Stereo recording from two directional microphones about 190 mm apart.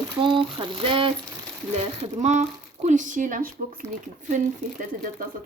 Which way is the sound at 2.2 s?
35° right (ahead or behind).